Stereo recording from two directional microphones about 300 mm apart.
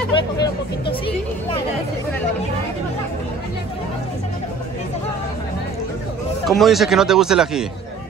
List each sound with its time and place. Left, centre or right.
0.1 s hubbub: centre
6.4 s speech: centre